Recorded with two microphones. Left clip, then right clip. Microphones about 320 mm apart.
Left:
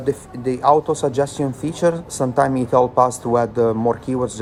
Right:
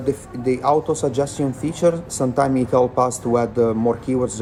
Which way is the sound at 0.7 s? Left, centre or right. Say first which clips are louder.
Left 4 dB; centre.